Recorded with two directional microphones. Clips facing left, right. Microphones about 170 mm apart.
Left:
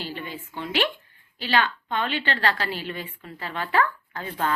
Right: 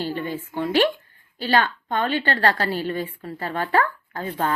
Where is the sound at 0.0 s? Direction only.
45° right (ahead or behind).